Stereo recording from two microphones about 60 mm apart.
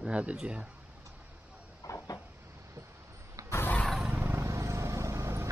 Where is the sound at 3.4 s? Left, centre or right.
Right.